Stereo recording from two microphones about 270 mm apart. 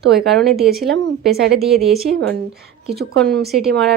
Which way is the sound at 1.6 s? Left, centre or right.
Centre.